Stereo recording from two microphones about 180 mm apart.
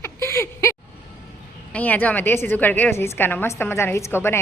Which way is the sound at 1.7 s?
10° left (ahead or behind).